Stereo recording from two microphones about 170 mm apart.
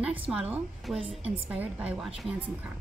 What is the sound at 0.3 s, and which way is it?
Speech, 5° right (ahead or behind).